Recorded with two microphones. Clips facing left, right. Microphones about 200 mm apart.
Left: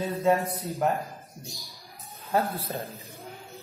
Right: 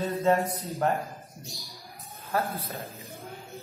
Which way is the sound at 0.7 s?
Centre (ahead or behind).